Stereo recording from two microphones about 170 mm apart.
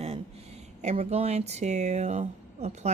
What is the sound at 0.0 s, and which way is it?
A woman's voice, 35° right (ahead or behind).